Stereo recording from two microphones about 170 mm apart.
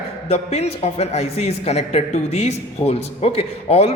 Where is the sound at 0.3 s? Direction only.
35° left (ahead or behind).